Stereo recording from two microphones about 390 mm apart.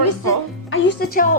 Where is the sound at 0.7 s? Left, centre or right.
Left.